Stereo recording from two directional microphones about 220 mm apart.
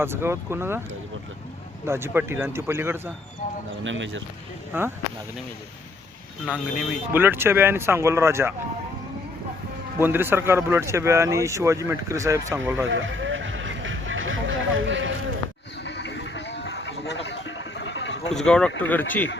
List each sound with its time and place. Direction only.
0.0 s speech: 10° right (ahead or behind)
1.9 s speech: 10° right (ahead or behind)
3.8 s speech: 60° right (ahead or behind)
4.7 s speech: 10° right (ahead or behind)
6.4 s speech: 5° right (ahead or behind)
10.0 s speech: 10° right (ahead or behind)
12.9 s a sound: 60° right (ahead or behind)
15.8 s a sound: 55° left (ahead or behind)
18.3 s speech: 5° left (ahead or behind)